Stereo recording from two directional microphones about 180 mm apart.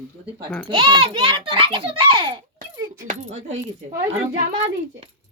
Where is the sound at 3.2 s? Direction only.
40° right (ahead or behind).